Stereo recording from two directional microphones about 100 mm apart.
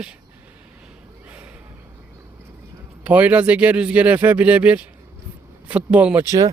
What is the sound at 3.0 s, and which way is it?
Speech, 15° right (ahead or behind).